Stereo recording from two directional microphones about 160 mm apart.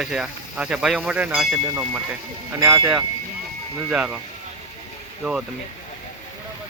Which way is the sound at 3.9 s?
5° right (ahead or behind).